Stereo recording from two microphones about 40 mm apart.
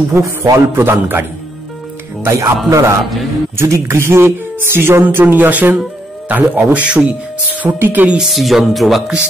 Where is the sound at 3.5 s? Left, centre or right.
Right.